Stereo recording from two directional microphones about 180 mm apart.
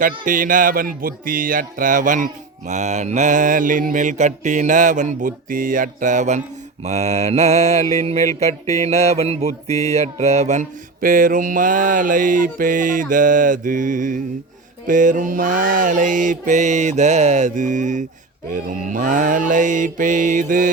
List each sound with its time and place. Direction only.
0.3 s speech: 50° right (ahead or behind)
6.8 s mantra: 35° right (ahead or behind)
9.8 s speech: 35° right (ahead or behind)